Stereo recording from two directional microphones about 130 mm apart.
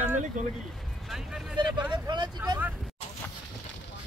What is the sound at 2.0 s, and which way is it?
Vehicle, 35° right (ahead or behind).